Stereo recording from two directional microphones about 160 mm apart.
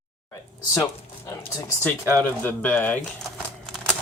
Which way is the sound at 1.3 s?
20° left (ahead or behind).